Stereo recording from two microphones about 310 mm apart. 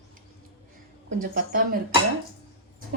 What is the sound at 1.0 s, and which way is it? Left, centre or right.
Speech, right.